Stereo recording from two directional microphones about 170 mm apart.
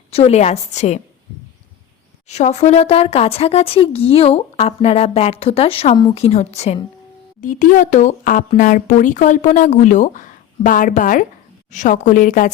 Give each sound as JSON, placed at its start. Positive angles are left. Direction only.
{"t": 0.1, "sound": "speech", "side_deg": 35}
{"t": 2.2, "sound": "speech", "side_deg": 40}